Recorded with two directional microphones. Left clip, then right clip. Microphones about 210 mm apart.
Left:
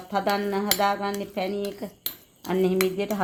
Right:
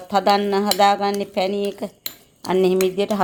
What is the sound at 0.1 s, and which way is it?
Speech, 40° right (ahead or behind).